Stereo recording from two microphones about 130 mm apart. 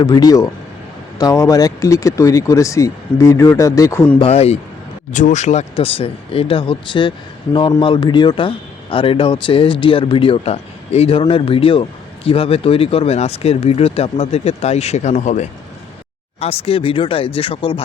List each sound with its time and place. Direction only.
0.0 s speech: 30° left (ahead or behind)
4.2 s speech: 50° left (ahead or behind)
5.1 s speech: 70° left (ahead or behind)
5.7 s speech: 45° left (ahead or behind); by 15.4 s 70° left (ahead or behind)
16.4 s speech: 50° left (ahead or behind)